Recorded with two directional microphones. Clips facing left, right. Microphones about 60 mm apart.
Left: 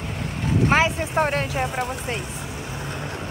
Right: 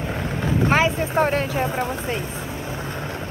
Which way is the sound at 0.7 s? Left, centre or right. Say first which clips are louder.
Right 1 dB; centre.